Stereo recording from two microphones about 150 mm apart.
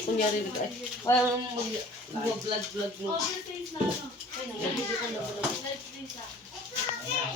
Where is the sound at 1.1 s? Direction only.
20° left (ahead or behind).